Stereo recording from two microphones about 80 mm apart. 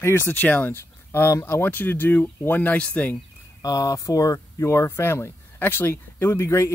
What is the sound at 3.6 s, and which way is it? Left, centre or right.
Speech, left.